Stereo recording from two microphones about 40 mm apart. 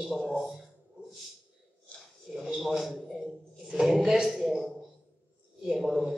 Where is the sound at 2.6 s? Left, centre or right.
Centre.